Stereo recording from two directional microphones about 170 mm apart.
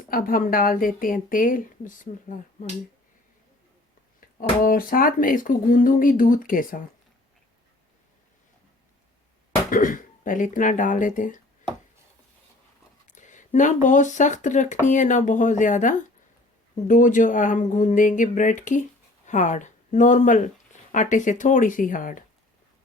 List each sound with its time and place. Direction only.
0.1 s speech: 55° left (ahead or behind)
4.4 s speech: 55° left (ahead or behind)
9.6 s speech: 55° left (ahead or behind)
13.1 s speech: 45° left (ahead or behind)